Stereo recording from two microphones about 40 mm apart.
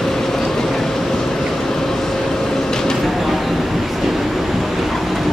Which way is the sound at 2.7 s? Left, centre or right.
Centre.